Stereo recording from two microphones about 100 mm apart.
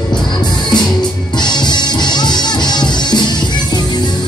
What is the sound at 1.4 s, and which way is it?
Music, 45° left (ahead or behind).